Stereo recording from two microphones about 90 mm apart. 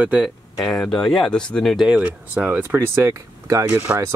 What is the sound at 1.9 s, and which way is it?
Speech, 15° right (ahead or behind).